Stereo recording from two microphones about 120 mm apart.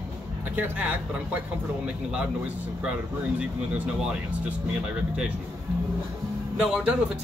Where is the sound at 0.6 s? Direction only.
15° right (ahead or behind).